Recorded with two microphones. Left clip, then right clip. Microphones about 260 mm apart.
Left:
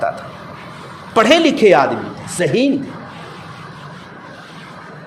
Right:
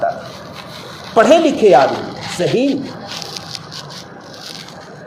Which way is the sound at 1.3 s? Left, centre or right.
Left.